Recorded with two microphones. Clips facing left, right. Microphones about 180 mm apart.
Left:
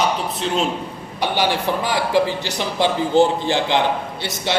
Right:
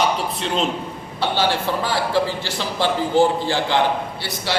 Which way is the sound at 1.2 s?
15° left (ahead or behind).